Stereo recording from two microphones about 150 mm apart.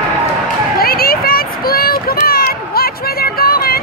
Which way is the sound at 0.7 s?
80° left.